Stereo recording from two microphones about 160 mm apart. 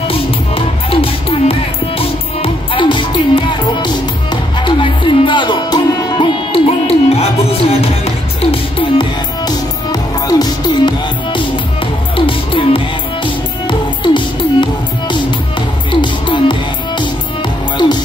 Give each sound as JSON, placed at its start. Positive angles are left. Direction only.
{"t": 0.1, "sound": "music", "side_deg": 35}